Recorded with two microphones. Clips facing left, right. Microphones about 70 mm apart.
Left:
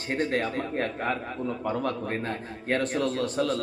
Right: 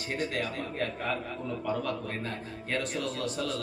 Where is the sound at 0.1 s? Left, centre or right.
Left.